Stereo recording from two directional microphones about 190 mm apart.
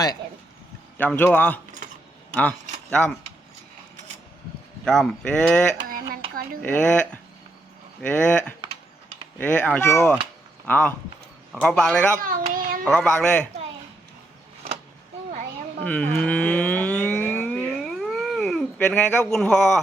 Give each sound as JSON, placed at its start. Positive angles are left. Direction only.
{"t": 0.9, "sound": "speech", "side_deg": 10}
{"t": 4.9, "sound": "speech", "side_deg": 5}
{"t": 5.9, "sound": "a sound", "side_deg": -50}
{"t": 6.6, "sound": "speech", "side_deg": 5}
{"t": 12.2, "sound": "child singing", "side_deg": -45}
{"t": 12.8, "sound": "speech", "side_deg": 5}
{"t": 15.8, "sound": "a sound", "side_deg": 5}